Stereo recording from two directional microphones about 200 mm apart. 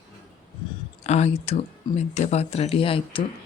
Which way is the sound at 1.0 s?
35° left (ahead or behind).